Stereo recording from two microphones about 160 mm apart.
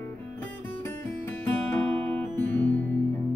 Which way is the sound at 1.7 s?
10° left (ahead or behind).